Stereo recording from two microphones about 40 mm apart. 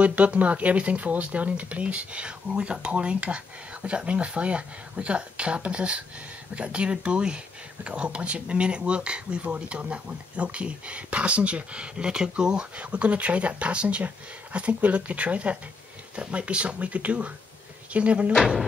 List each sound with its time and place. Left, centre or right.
0.0 s speech: right
12.7 s speech: right
18.3 s speech: centre